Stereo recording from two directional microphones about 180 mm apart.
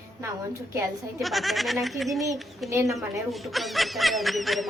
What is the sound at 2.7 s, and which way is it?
Speech, 15° right (ahead or behind).